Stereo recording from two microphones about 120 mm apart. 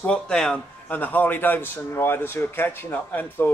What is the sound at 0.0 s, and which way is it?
A man's voice, 5° left (ahead or behind).